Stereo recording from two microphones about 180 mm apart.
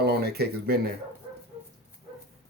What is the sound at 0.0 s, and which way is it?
Speech, 60° right (ahead or behind).